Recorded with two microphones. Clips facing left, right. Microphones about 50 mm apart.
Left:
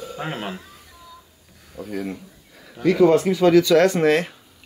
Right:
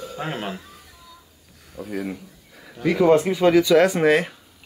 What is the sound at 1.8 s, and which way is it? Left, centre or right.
Speech, centre.